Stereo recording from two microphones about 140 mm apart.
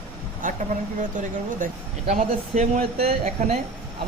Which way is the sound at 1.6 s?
70° right (ahead or behind).